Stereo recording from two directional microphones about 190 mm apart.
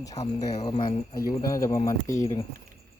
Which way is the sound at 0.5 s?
35° left (ahead or behind).